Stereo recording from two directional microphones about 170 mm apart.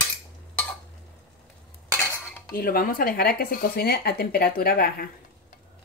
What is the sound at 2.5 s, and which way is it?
Speech, 55° left (ahead or behind).